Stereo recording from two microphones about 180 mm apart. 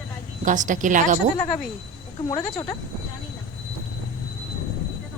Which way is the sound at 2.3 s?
20° left (ahead or behind).